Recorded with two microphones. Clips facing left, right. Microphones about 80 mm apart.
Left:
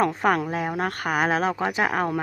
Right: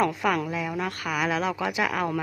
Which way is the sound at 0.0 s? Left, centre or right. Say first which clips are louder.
Left 3 dB; left.